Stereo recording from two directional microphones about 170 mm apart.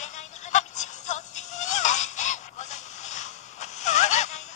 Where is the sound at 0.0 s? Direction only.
45° left (ahead or behind).